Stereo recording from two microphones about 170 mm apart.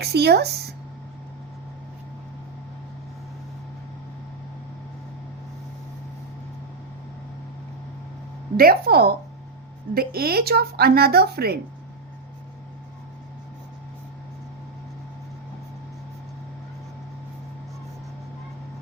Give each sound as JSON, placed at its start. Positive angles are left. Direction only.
{"t": 0.0, "sound": "speech", "side_deg": -70}
{"t": 8.5, "sound": "speech", "side_deg": -60}